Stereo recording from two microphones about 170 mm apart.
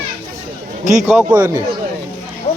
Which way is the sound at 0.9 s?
10° right (ahead or behind).